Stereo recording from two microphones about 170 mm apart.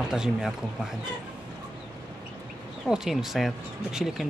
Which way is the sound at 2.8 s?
Centre (ahead or behind).